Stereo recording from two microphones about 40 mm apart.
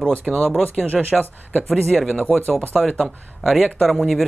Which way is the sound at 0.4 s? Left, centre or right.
Centre.